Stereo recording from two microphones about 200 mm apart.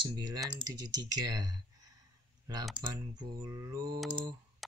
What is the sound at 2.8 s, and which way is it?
Speech, 15° right (ahead or behind).